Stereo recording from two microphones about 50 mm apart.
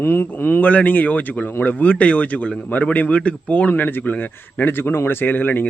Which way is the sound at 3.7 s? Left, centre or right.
Left.